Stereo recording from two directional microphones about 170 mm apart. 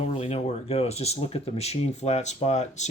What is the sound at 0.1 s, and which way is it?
Speech, 35° left (ahead or behind).